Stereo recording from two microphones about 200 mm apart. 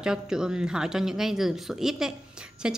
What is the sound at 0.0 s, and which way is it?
A woman's voice, 5° right (ahead or behind).